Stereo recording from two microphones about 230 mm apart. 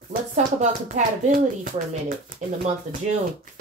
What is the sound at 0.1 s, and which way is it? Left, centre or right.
Speech, right.